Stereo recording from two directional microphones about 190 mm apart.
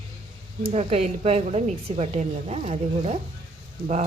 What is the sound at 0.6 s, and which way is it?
A woman's voice, 35° right (ahead or behind).